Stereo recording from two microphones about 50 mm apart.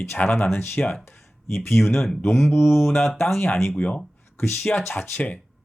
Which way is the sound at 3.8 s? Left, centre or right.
Left.